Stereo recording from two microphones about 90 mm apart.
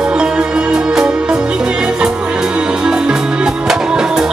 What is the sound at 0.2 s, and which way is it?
Music, 10° right (ahead or behind).